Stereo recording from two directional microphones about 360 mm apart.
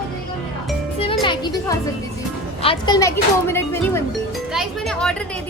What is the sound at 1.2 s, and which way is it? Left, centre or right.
Speech, centre.